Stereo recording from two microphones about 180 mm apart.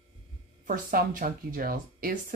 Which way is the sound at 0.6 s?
45° right (ahead or behind).